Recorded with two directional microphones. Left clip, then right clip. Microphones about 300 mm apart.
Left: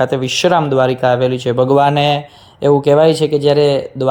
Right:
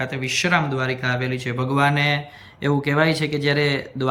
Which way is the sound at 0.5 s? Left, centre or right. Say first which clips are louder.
Left 9 dB; centre.